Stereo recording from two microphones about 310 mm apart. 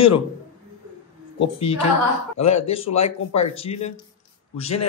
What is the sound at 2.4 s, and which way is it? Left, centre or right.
Speech, left.